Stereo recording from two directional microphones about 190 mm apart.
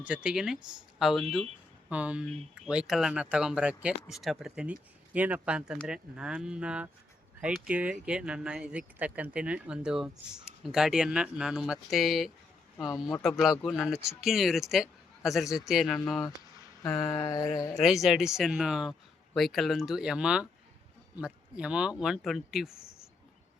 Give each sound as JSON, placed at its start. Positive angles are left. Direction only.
{"t": 0.0, "sound": "speech", "side_deg": -5}
{"t": 5.7, "sound": "speech", "side_deg": 5}
{"t": 6.1, "sound": "speech", "side_deg": -5}
{"t": 13.6, "sound": "speech", "side_deg": 0}
{"t": 16.8, "sound": "mantra", "side_deg": 15}
{"t": 17.7, "sound": "speech", "side_deg": 0}